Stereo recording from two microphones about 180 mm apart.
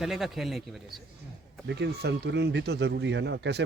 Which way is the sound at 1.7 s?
65° right (ahead or behind).